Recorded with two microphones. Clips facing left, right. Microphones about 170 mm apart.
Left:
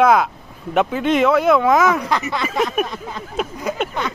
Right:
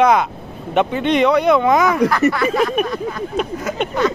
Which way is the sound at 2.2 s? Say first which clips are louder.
Right 10 dB; 70° right (ahead or behind).